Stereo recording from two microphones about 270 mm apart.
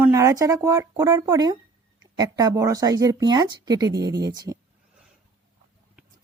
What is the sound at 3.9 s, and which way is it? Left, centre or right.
Speech, right.